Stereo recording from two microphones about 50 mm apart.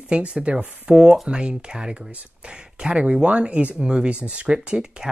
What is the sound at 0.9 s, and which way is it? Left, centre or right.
Speech, centre.